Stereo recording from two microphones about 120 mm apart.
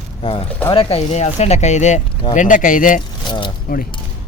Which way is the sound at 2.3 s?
90° left.